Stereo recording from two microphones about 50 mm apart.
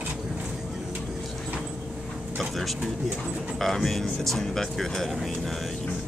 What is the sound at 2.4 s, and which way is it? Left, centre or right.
Speech, centre.